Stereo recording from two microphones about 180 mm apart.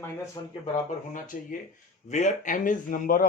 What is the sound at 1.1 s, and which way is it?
Speech, 45° left (ahead or behind).